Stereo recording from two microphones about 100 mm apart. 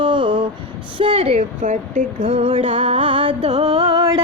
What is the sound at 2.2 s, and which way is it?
Music, 80° right.